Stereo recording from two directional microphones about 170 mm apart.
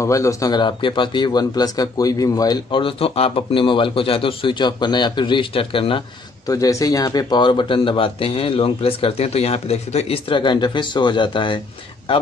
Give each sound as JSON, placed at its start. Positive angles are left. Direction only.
{"t": 0.0, "sound": "speech", "side_deg": 20}
{"t": 6.4, "sound": "speech", "side_deg": 20}